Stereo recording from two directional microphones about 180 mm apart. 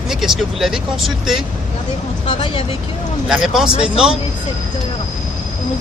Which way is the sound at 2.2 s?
30° left (ahead or behind).